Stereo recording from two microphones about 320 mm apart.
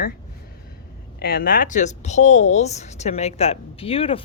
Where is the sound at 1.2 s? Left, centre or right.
Left.